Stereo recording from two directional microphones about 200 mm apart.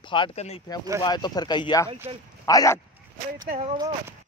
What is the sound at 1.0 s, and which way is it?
Speech, 20° left (ahead or behind).